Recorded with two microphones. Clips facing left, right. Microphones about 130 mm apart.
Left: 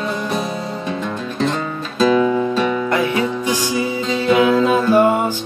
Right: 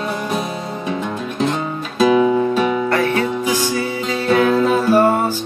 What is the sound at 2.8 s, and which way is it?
Music, 15° left (ahead or behind).